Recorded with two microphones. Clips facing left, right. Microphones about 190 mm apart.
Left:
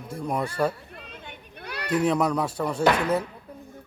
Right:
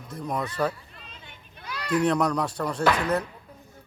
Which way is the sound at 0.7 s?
55° left (ahead or behind).